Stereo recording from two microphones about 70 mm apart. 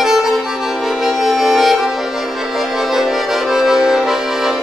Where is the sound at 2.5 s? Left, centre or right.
Centre.